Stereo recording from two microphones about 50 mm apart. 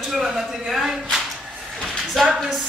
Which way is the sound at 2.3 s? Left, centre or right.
Centre.